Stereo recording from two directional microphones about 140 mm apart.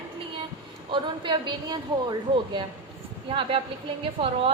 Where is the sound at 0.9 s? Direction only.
35° right (ahead or behind).